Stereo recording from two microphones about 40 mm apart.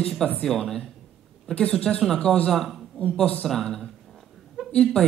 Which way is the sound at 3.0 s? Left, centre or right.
Left.